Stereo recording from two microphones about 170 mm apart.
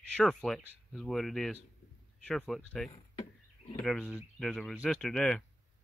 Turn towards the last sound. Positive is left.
turn(degrees=5)  # may be behind; listen again after turning